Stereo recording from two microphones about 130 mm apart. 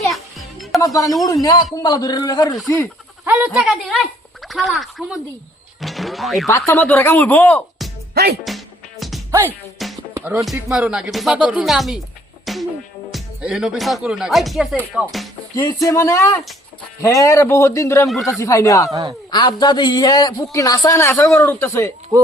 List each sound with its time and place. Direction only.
0.1 s music: centre (ahead or behind)
0.8 s a man's voice: 25° left (ahead or behind)
3.2 s speech: 10° right (ahead or behind)
6.7 s speech: 15° left (ahead or behind)
8.4 s music: centre (ahead or behind)
10.2 s speech: 20° right (ahead or behind)
10.7 s speech: 10° right (ahead or behind)
12.5 s music: centre (ahead or behind)
13.1 s speech: centre (ahead or behind)
15.5 s a man's voice: 25° left (ahead or behind)